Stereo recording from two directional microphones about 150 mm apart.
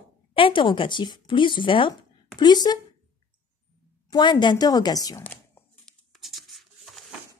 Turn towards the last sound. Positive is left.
turn(degrees=0)  # may be behind; listen again after turning